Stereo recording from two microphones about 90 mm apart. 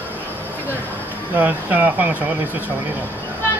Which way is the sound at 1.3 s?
20° right (ahead or behind).